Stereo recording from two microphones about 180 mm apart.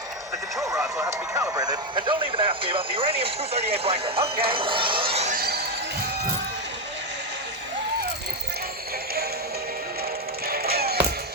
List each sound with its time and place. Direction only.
0.6 s speech: 15° right (ahead or behind); by 5.3 s 30° right (ahead or behind)
5.3 s basketball bounce: 60° right (ahead or behind)
10.5 s music: 60° right (ahead or behind)